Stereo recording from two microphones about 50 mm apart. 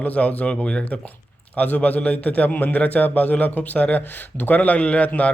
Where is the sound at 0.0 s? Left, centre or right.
Left.